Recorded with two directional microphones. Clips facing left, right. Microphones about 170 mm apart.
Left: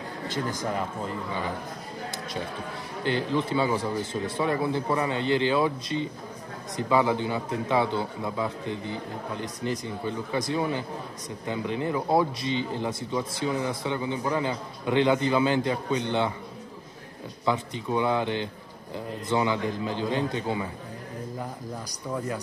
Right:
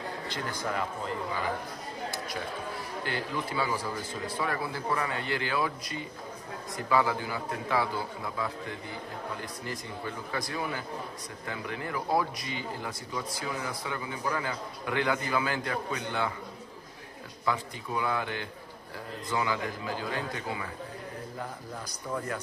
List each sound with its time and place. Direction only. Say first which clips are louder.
0.3 s a man's voice: left 10 dB; 45° left (ahead or behind)
3.0 s speech: left 9 dB; 20° left (ahead or behind)
17.5 s speech: left 5 dB; 25° left (ahead or behind)